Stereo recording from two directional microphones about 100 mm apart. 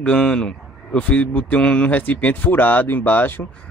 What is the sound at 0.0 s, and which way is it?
A man's voice, 10° left (ahead or behind).